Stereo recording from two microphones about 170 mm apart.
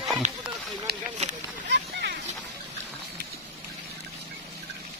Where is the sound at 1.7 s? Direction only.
90° right.